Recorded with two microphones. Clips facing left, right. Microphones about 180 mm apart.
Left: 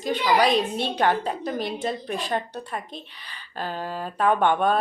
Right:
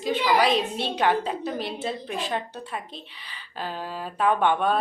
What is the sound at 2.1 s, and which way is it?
Speech, 40° left (ahead or behind).